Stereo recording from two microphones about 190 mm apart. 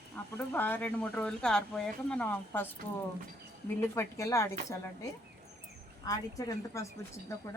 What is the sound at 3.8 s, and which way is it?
A woman's voice, 15° left (ahead or behind).